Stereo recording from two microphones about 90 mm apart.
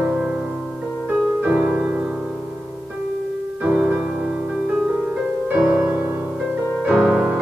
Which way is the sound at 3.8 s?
10° right (ahead or behind).